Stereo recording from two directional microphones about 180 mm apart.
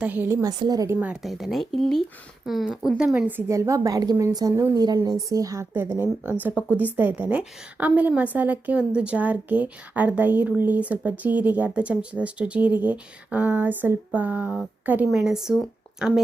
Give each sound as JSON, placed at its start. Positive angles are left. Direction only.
{"t": 0.0, "sound": "a woman's voice", "side_deg": -10}
{"t": 0.9, "sound": "a woman's voice", "side_deg": -5}